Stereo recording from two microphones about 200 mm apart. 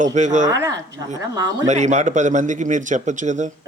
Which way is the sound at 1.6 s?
35° right (ahead or behind).